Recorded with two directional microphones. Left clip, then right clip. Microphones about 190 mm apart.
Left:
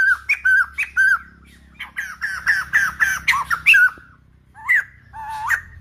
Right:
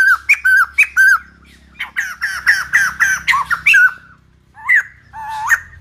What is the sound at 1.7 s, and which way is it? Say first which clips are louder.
Fowl: right 8 dB; 15° right (ahead or behind).